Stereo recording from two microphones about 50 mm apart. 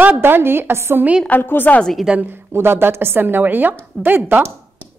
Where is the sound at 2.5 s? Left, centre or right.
Right.